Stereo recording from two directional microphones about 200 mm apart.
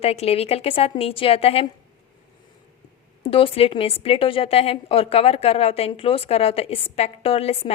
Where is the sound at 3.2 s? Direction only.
25° left (ahead or behind).